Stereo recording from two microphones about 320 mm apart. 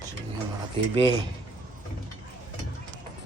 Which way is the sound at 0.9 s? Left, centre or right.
Centre.